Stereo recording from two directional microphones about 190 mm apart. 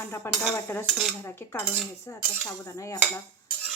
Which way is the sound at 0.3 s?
15° left (ahead or behind).